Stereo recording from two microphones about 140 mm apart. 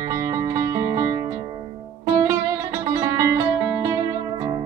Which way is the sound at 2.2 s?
20° right (ahead or behind).